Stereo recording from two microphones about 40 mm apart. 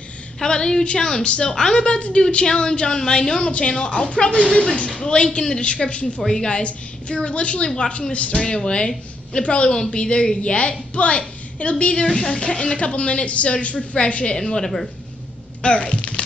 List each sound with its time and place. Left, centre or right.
0.4 s a woman's voice: centre
6.2 s a man's voice: centre
14.3 s a woman's voice: centre
15.6 s a sound: left